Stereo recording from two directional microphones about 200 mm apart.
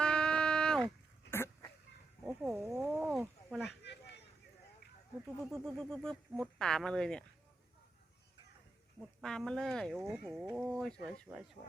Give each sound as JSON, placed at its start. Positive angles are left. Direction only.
{"t": 0.0, "sound": "a sound", "side_deg": 5}
{"t": 2.2, "sound": "wild animals", "side_deg": -5}
{"t": 3.7, "sound": "a sound", "side_deg": 55}
{"t": 5.5, "sound": "speech", "side_deg": 0}
{"t": 9.0, "sound": "speech", "side_deg": 0}
{"t": 10.0, "sound": "speech", "side_deg": -10}
{"t": 10.6, "sound": "speech", "side_deg": 0}